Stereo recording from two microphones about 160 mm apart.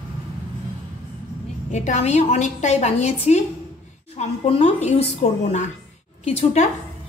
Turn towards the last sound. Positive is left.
turn(degrees=45)  # may be behind; listen again after turning